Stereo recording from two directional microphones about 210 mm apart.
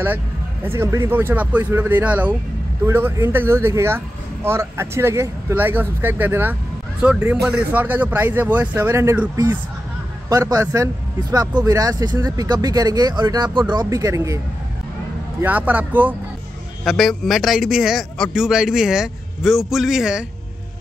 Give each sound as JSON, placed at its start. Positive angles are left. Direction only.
{"t": 0.7, "sound": "speech", "side_deg": -15}
{"t": 15.4, "sound": "a man's voice", "side_deg": -10}